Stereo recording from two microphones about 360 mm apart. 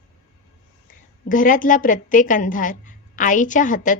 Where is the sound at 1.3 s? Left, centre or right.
Left.